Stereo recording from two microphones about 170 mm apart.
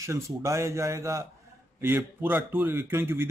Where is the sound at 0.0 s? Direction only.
15° right (ahead or behind).